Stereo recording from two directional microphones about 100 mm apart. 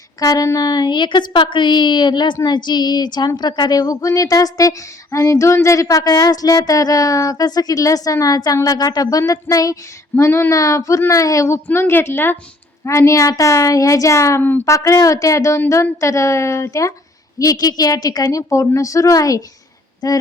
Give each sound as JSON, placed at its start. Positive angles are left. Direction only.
{"t": 0.2, "sound": "a woman's voice", "side_deg": 35}